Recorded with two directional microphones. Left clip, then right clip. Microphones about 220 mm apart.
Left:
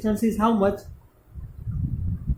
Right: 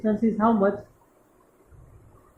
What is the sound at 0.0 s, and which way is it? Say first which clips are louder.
Speech: even; 40° left (ahead or behind).